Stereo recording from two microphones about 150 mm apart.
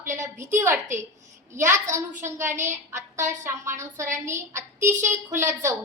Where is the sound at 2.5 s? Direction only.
55° right (ahead or behind).